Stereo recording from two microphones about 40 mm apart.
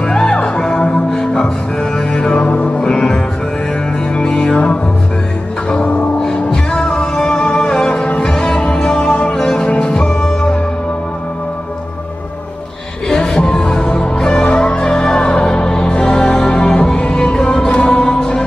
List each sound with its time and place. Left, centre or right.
0.0 s music: centre
2.4 s music: left
4.3 s music: centre
6.1 s music: centre
13.1 s music: centre
13.4 s music: centre
14.2 s music: centre